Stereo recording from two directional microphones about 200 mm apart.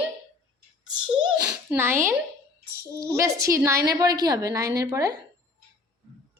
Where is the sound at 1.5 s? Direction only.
10° right (ahead or behind).